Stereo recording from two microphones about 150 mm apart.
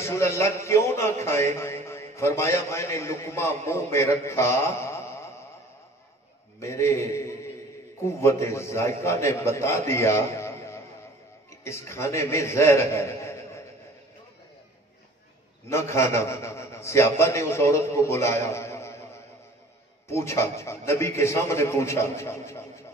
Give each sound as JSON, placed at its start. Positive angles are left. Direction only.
{"t": 0.0, "sound": "a man's voice", "side_deg": 20}
{"t": 6.6, "sound": "a man's voice", "side_deg": 20}
{"t": 15.7, "sound": "a man's voice", "side_deg": 20}
{"t": 20.1, "sound": "a man's voice", "side_deg": 20}